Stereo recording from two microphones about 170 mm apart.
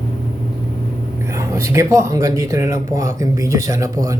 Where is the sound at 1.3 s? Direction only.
15° right (ahead or behind).